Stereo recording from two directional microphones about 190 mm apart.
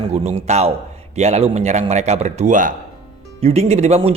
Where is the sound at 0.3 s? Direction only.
35° right (ahead or behind).